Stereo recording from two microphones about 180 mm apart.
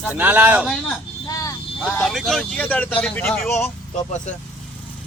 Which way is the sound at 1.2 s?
20° left (ahead or behind).